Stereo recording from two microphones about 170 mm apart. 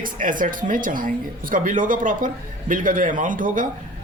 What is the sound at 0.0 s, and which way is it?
Speech, 50° right (ahead or behind).